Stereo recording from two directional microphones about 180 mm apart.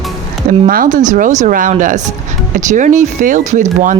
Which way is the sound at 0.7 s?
50° right (ahead or behind).